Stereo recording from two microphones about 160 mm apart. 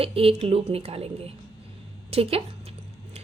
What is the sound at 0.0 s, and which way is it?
A woman's voice, 35° right (ahead or behind).